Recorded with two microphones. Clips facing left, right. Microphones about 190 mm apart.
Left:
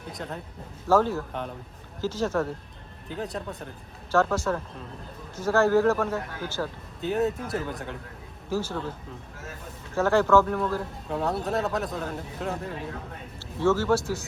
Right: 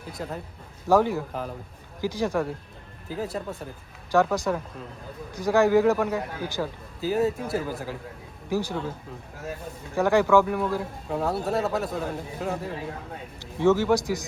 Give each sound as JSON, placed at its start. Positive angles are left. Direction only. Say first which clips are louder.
{"t": 0.1, "sound": "speech", "louder": "right 2 dB", "side_deg": 0}
{"t": 0.9, "sound": "speech", "louder": "right 1 dB", "side_deg": -15}
{"t": 4.1, "sound": "speech", "louder": "right 1 dB", "side_deg": -15}
{"t": 7.0, "sound": "speech", "louder": "right 2 dB", "side_deg": 0}
{"t": 8.4, "sound": "speech", "louder": "right 2 dB", "side_deg": -15}
{"t": 9.9, "sound": "speech", "louder": "right 1 dB", "side_deg": -15}
{"t": 11.1, "sound": "speech", "louder": "right 1 dB", "side_deg": 0}
{"t": 13.4, "sound": "speech", "louder": "right 3 dB", "side_deg": -15}